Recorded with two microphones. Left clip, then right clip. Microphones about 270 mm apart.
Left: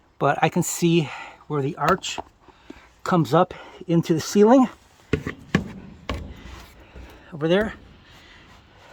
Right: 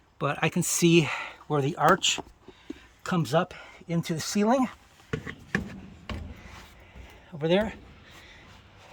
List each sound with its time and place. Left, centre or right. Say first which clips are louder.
0.2 s speech: left 8 dB; centre
0.9 s speech: right 2 dB; centre
3.0 s speech: left 7 dB; centre
6.1 s wood: left 8 dB; left
7.3 s speech: left 4 dB; centre